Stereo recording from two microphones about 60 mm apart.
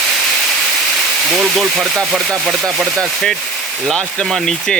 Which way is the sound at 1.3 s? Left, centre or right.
Centre.